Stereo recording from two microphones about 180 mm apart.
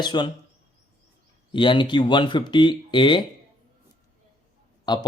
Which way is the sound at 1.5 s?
25° left (ahead or behind).